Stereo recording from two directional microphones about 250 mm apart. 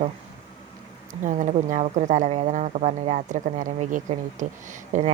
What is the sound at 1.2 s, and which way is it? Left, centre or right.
Speech, right.